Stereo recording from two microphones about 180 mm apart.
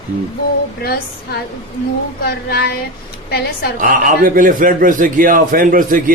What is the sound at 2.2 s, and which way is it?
Child singing, 60° left (ahead or behind).